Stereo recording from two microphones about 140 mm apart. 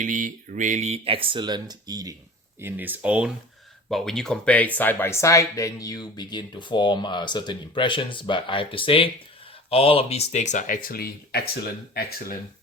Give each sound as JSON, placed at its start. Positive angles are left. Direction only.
{"t": 0.0, "sound": "speech", "side_deg": -65}
{"t": 2.6, "sound": "speech", "side_deg": -15}
{"t": 3.8, "sound": "speech", "side_deg": 0}